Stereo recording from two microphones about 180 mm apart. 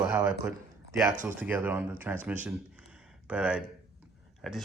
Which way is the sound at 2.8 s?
5° right (ahead or behind).